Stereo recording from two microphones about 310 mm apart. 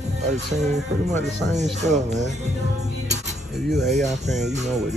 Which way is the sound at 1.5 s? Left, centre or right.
Right.